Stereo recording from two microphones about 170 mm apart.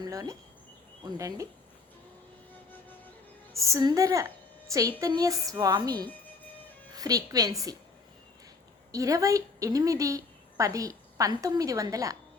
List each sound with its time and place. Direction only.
0.0 s a woman's voice: 20° right (ahead or behind)
3.6 s a woman's voice: 20° right (ahead or behind)
8.9 s a woman's voice: 20° right (ahead or behind)